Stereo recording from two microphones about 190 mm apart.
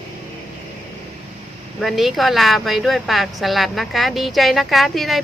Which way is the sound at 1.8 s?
Centre (ahead or behind).